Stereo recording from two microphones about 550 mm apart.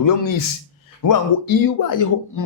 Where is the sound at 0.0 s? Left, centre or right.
Left.